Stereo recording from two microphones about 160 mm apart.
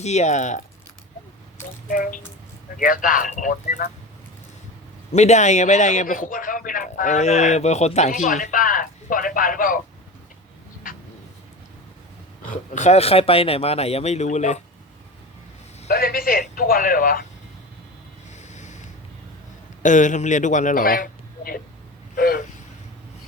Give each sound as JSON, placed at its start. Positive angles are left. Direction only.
{"t": 0.0, "sound": "a man's voice", "side_deg": 45}
{"t": 1.9, "sound": "a man's voice", "side_deg": 60}
{"t": 5.1, "sound": "a man's voice", "side_deg": 45}
{"t": 12.5, "sound": "speech", "side_deg": 50}
{"t": 15.9, "sound": "a man's voice", "side_deg": 70}
{"t": 18.3, "sound": "snort", "side_deg": 45}
{"t": 19.8, "sound": "a man's voice", "side_deg": 50}
{"t": 22.1, "sound": "vehicle", "side_deg": 60}